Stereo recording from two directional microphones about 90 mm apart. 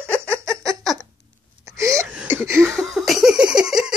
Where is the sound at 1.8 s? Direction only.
35° right (ahead or behind).